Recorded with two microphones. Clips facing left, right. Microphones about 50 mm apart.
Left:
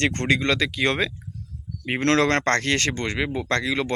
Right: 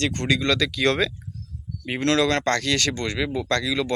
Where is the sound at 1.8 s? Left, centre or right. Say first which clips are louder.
Left 1 dB; left.